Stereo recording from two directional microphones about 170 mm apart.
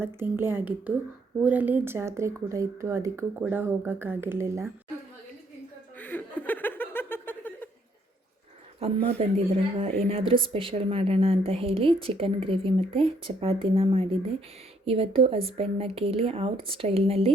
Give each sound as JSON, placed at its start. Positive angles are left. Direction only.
{"t": 0.0, "sound": "speech", "side_deg": -15}
{"t": 6.0, "sound": "chuckle", "side_deg": 10}
{"t": 8.8, "sound": "a woman's voice", "side_deg": -35}